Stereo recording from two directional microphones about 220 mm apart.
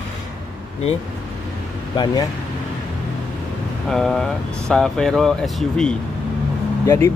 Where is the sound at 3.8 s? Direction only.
Centre (ahead or behind).